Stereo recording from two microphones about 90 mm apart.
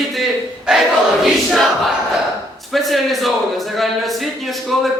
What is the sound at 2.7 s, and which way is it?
Speech, centre (ahead or behind).